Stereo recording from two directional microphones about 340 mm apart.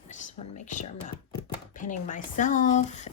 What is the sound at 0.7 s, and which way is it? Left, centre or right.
Speech, left.